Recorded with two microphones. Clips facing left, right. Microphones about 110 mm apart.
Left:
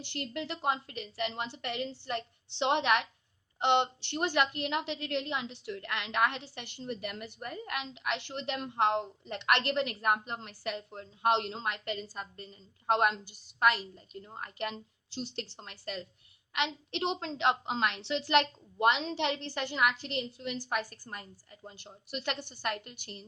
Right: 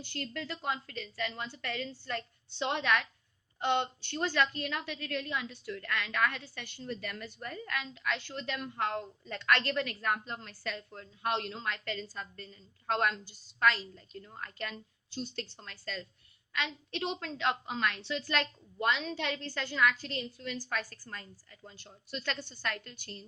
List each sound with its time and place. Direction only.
0.0 s a woman's voice: 20° left (ahead or behind)